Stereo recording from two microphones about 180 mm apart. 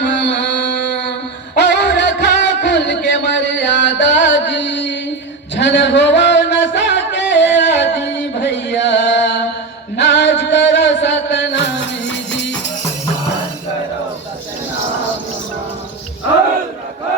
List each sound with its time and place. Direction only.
0.0 s music: 75° left (ahead or behind)